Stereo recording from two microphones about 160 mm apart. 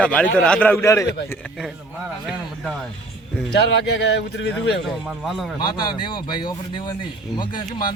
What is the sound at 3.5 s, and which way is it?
Speech, 90° left.